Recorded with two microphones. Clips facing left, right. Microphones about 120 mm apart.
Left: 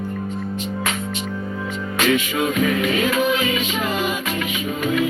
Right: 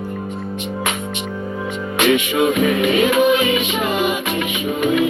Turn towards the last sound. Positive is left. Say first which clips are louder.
# right 4 dB
turn(degrees=-15)  # may be behind; listen again after turning